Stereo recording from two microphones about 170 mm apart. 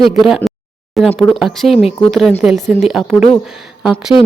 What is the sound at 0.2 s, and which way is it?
A woman's voice, centre (ahead or behind).